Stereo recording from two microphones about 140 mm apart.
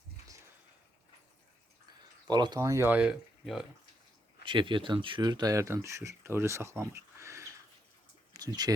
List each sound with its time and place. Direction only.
2.2 s speech: 30° right (ahead or behind); by 3.7 s centre (ahead or behind)
4.4 s speech: 35° right (ahead or behind); by 7.4 s 20° right (ahead or behind)
8.3 s a sound: 30° right (ahead or behind)